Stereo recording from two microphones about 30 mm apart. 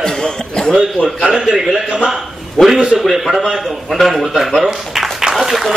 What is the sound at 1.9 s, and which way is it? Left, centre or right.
Speech, right.